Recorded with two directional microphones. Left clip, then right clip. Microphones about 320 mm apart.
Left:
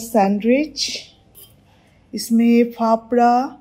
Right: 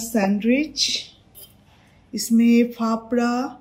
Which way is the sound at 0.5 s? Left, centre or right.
Right.